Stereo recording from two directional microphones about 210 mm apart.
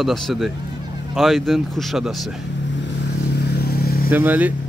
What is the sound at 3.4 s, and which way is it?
Vehicle, 50° left (ahead or behind).